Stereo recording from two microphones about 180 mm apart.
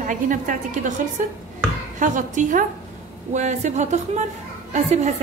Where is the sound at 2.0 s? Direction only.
45° right (ahead or behind).